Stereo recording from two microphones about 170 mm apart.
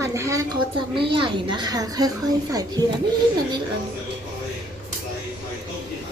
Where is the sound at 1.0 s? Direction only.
30° right (ahead or behind).